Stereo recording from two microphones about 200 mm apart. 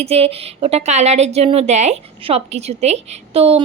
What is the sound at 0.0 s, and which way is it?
A woman's voice, 30° right (ahead or behind).